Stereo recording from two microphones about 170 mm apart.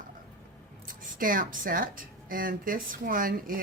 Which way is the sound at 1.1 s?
55° right (ahead or behind).